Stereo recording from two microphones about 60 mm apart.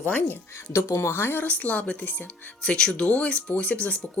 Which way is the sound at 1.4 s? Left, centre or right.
Left.